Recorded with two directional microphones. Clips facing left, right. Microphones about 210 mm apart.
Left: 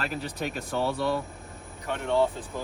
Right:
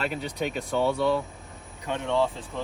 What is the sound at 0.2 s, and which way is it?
Speech, centre (ahead or behind).